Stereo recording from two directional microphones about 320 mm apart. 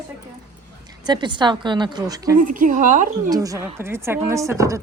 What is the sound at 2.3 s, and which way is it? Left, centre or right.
Speech, right.